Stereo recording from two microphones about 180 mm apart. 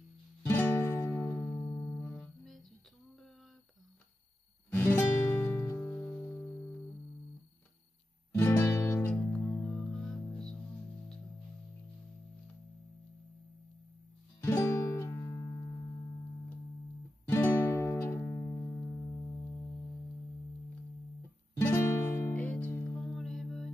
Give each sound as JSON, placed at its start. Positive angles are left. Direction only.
{"t": 0.5, "sound": "music", "side_deg": 15}
{"t": 4.9, "sound": "music", "side_deg": 10}
{"t": 8.3, "sound": "music", "side_deg": 15}
{"t": 14.4, "sound": "music", "side_deg": 15}
{"t": 17.3, "sound": "music", "side_deg": 10}
{"t": 21.5, "sound": "music", "side_deg": 15}
{"t": 22.9, "sound": "music", "side_deg": 0}